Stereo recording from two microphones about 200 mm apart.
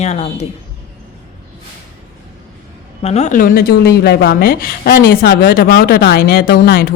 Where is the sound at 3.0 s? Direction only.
35° left (ahead or behind).